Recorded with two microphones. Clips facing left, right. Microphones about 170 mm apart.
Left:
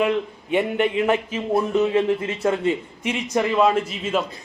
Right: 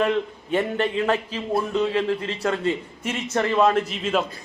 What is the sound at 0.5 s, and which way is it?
A man's voice, 15° left (ahead or behind).